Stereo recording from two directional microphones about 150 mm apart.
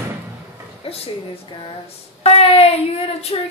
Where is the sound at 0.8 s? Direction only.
40° left (ahead or behind).